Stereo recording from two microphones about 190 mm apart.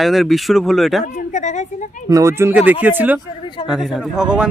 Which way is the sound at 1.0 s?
40° left (ahead or behind).